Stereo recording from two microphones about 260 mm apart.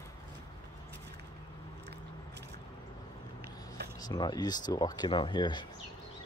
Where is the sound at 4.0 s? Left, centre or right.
Centre.